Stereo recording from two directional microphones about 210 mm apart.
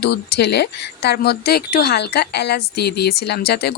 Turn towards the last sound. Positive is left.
turn(degrees=50)  # may be behind; listen again after turning